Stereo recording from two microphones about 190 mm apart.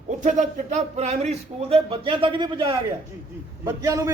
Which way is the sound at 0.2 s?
40° right (ahead or behind).